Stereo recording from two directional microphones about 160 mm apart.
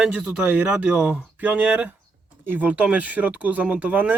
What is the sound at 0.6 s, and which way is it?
Speech, 10° right (ahead or behind).